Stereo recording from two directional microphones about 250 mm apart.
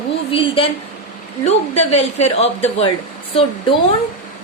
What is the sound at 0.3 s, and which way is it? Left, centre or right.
Speech, left.